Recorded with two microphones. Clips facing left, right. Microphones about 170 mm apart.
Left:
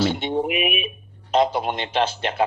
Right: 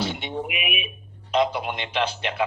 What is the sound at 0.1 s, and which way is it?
A man's voice, 35° left (ahead or behind).